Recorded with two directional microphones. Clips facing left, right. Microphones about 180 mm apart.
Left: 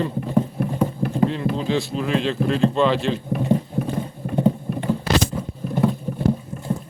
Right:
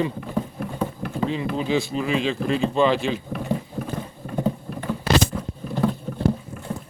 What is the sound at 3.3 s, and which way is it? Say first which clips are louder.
Typing: left 6 dB; 20° left (ahead or behind).